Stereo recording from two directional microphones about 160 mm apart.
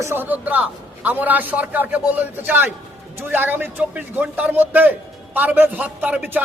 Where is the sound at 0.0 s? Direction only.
15° right (ahead or behind).